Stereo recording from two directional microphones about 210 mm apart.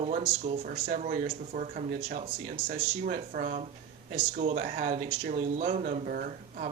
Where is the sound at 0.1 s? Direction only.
30° right (ahead or behind).